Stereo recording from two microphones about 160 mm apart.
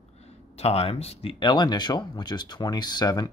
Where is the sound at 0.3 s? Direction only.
40° left (ahead or behind).